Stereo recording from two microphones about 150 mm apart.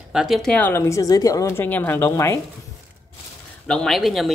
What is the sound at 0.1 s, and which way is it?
A woman's voice, centre (ahead or behind).